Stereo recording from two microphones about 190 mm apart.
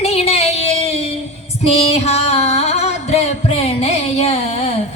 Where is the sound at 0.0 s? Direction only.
30° left (ahead or behind).